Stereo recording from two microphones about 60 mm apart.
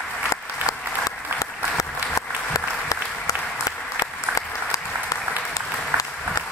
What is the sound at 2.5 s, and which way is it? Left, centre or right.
Applause, left.